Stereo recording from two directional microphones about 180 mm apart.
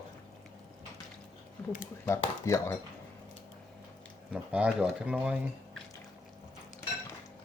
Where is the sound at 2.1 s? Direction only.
15° left (ahead or behind).